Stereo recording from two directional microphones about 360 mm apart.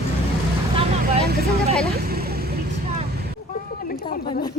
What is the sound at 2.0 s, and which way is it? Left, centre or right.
Vehicle, right.